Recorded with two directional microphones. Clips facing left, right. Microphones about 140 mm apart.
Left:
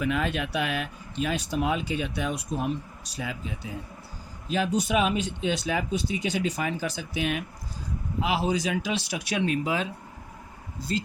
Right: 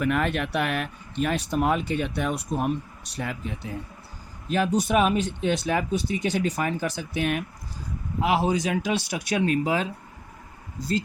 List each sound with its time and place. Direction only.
0.0 s speech: 55° right (ahead or behind); by 9.9 s 40° right (ahead or behind)